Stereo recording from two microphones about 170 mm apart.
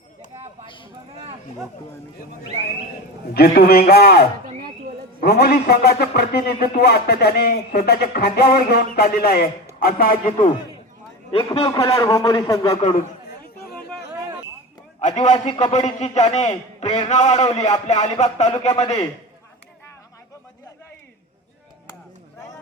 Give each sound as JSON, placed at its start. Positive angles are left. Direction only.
{"t": 3.3, "sound": "a man's voice", "side_deg": 65}
{"t": 11.3, "sound": "speech", "side_deg": 35}
{"t": 11.7, "sound": "a man's voice", "side_deg": 20}
{"t": 12.7, "sound": "speech", "side_deg": 35}
{"t": 15.0, "sound": "a man's voice", "side_deg": 45}